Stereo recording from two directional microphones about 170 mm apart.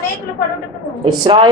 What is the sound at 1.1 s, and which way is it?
Speech, 30° right (ahead or behind).